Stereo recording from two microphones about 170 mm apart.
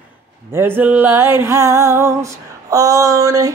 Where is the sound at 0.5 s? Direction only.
10° right (ahead or behind).